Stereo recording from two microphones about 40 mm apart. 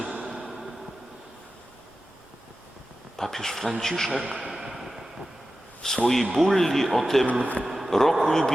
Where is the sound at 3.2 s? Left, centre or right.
Centre.